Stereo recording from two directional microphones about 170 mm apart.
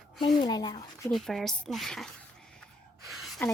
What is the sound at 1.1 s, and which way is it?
Speech, centre (ahead or behind).